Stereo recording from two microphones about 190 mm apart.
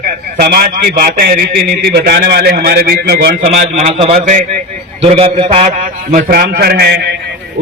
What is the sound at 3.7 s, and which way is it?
Speech, 35° right (ahead or behind).